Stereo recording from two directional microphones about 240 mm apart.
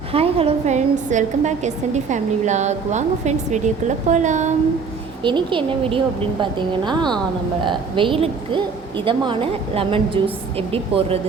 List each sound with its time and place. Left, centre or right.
0.1 s a woman's voice: right
5.2 s a woman's voice: centre